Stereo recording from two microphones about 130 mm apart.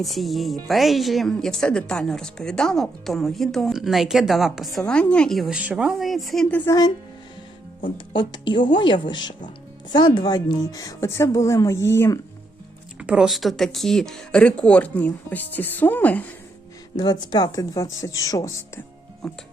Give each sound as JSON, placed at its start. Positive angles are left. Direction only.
{"t": 0.0, "sound": "a woman's voice", "side_deg": 0}
{"t": 6.7, "sound": "speech", "side_deg": 30}
{"t": 7.9, "sound": "speech", "side_deg": 35}
{"t": 13.0, "sound": "speech", "side_deg": -5}
{"t": 17.0, "sound": "speech", "side_deg": 30}
{"t": 19.2, "sound": "a woman's voice", "side_deg": 0}